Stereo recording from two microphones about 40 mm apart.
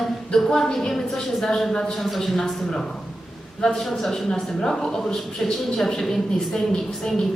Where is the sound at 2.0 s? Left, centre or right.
Centre.